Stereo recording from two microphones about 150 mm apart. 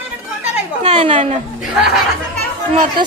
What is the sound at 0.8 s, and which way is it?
Speech, 50° right (ahead or behind).